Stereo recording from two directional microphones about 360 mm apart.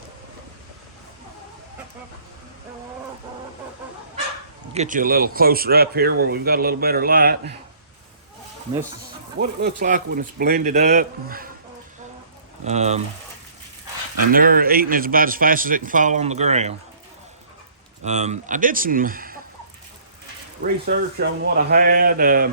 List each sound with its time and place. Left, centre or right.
4.7 s speech: centre
9.4 s speech: right
12.6 s speech: centre
14.3 s speech: right
18.0 s speech: centre
20.6 s speech: right